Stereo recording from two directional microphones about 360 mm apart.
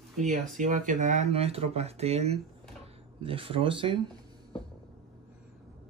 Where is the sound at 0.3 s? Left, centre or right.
Right.